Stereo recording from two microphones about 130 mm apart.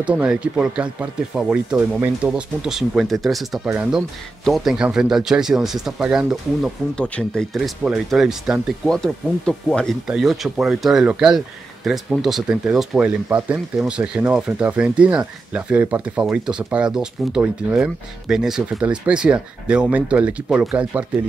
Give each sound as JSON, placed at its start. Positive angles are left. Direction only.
{"t": 0.0, "sound": "speech", "side_deg": -10}
{"t": 1.8, "sound": "speech", "side_deg": -15}
{"t": 2.2, "sound": "speech", "side_deg": -5}